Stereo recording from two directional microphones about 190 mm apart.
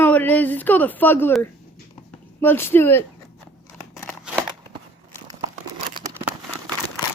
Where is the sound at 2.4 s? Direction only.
10° left (ahead or behind).